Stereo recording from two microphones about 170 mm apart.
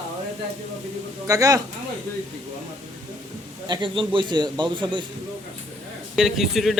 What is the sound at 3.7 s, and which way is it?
A man's voice, 30° right (ahead or behind).